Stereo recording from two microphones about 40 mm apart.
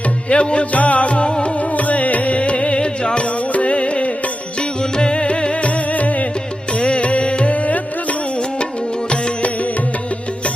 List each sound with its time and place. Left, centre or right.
0.3 s music: left